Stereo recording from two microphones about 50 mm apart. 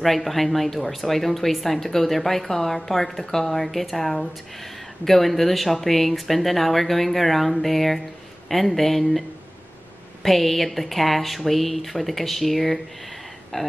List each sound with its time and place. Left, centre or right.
0.0 s speech: centre
10.2 s speech: centre
13.5 s speech: centre